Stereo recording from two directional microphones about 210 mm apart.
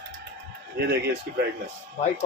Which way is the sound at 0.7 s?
50° right (ahead or behind).